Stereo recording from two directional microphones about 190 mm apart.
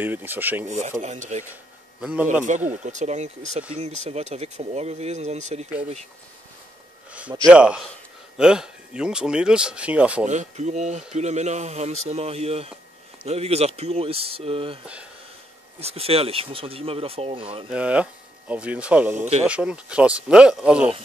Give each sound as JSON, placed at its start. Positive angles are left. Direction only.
{"t": 0.0, "sound": "speech", "side_deg": -10}
{"t": 0.7, "sound": "speech", "side_deg": -40}
{"t": 1.5, "sound": "a sound", "side_deg": -5}
{"t": 2.7, "sound": "speech", "side_deg": -40}
{"t": 7.1, "sound": "a sound", "side_deg": -5}
{"t": 7.4, "sound": "speech", "side_deg": -5}
{"t": 10.2, "sound": "speech", "side_deg": -40}
{"t": 15.8, "sound": "speech", "side_deg": -30}
{"t": 17.6, "sound": "speech", "side_deg": -5}
{"t": 19.1, "sound": "speech", "side_deg": -35}
{"t": 19.4, "sound": "speech", "side_deg": -5}